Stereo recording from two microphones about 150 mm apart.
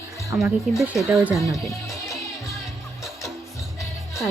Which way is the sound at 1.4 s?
20° left (ahead or behind).